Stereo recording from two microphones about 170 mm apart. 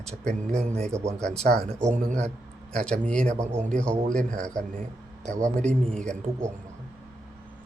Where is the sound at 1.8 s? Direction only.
45° right (ahead or behind).